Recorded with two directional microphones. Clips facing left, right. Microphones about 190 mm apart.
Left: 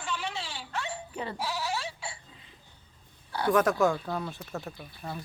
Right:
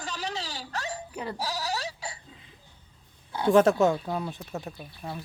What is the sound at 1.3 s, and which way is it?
Sheep, 40° right (ahead or behind).